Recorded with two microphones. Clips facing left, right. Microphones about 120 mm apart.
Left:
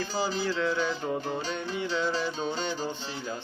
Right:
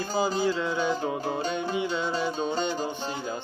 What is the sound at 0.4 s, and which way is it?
Music, 15° right (ahead or behind).